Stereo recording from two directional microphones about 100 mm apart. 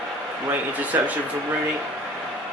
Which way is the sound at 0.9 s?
20° right (ahead or behind).